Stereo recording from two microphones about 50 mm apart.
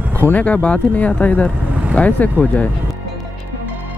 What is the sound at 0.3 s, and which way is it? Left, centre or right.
Speech, left.